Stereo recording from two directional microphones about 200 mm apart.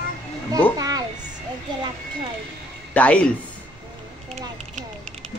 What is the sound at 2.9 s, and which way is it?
Speech, 5° left (ahead or behind).